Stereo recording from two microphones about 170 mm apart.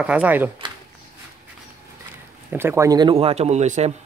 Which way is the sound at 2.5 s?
15° right (ahead or behind).